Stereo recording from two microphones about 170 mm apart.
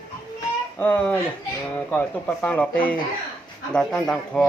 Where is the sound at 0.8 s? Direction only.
10° left (ahead or behind).